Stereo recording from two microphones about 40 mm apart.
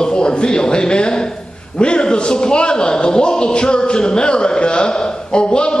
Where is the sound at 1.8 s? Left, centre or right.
Left.